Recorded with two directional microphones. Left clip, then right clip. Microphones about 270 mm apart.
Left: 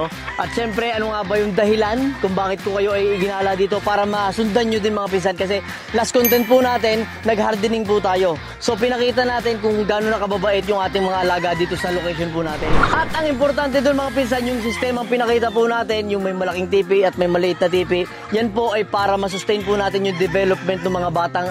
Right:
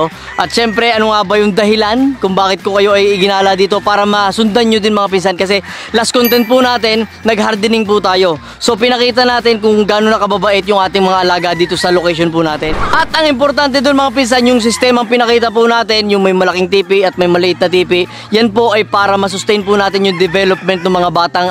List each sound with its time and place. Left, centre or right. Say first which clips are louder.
0.4 s speech: right 10 dB; right
1.7 s speech: right 7 dB; right
6.3 s speech: right 5 dB; centre
11.8 s speech: right 11 dB; right
12.9 s speech: right 9 dB; right
15.1 s speech: right 8 dB; right
16.3 s speech: right 11 dB; right
16.7 s speech: right 2 dB; right